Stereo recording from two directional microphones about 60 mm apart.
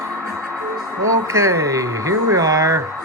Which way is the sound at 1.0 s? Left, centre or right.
Right.